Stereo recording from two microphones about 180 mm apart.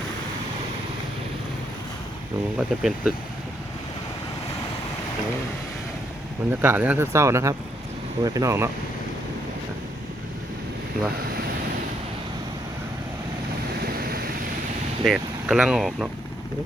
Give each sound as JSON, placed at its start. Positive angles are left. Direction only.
{"t": 2.6, "sound": "speech", "side_deg": -5}
{"t": 6.5, "sound": "speech", "side_deg": -10}
{"t": 15.0, "sound": "speech", "side_deg": -5}